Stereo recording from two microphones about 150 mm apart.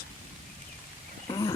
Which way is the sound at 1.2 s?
30° left (ahead or behind).